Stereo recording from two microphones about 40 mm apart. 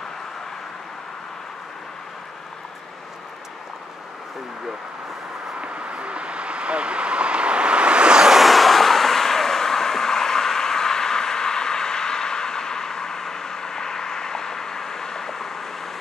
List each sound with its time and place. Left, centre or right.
5.6 s vehicle: right
8.3 s vehicle: centre